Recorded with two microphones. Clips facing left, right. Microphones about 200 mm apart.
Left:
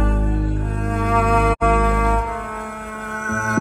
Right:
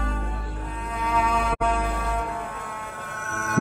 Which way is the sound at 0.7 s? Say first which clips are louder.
Left 5 dB; 45° left (ahead or behind).